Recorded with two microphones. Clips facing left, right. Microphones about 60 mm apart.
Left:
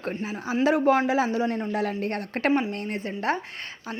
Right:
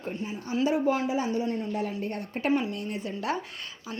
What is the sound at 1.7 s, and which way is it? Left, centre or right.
Speech, left.